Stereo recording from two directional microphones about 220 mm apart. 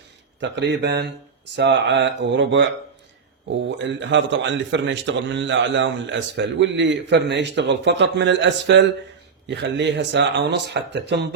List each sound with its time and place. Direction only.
0.3 s speech: 55° right (ahead or behind)
3.8 s a man's voice: 55° right (ahead or behind)